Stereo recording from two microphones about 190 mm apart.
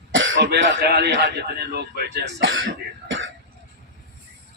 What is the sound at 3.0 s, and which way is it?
Throat clearing, 85° right.